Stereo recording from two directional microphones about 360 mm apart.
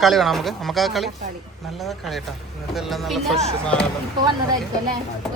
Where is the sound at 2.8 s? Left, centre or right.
Centre.